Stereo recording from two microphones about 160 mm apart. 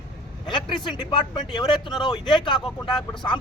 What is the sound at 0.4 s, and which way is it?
Speech, 30° left (ahead or behind).